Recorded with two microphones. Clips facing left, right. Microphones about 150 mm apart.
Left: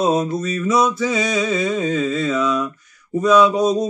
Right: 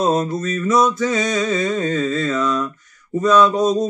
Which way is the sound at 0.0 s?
Centre (ahead or behind).